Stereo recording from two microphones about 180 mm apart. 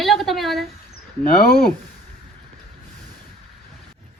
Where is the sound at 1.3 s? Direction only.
55° left (ahead or behind).